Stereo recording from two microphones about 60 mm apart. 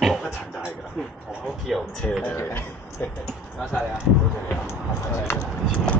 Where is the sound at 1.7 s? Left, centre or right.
Centre.